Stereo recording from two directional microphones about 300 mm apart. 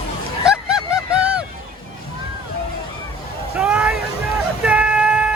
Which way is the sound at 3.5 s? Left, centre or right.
Centre.